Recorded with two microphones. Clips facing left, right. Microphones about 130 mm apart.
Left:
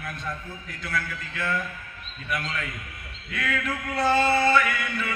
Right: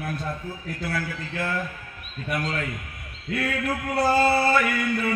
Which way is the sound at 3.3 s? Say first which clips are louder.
Right 3 dB; 35° right (ahead or behind).